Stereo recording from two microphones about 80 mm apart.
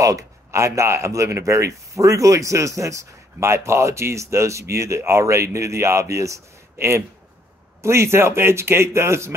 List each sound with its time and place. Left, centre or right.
0.0 s speech: right